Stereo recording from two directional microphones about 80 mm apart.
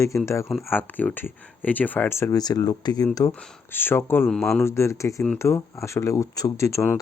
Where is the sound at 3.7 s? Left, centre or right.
Left.